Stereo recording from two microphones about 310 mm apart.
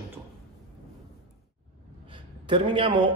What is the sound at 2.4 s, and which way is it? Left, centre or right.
Speech, centre.